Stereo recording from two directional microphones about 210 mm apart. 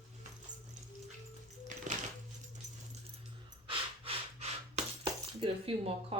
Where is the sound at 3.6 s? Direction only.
25° right (ahead or behind).